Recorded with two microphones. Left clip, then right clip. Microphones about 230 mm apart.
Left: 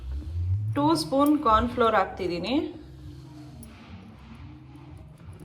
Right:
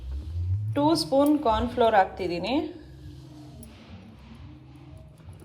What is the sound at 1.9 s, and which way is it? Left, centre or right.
Speech, right.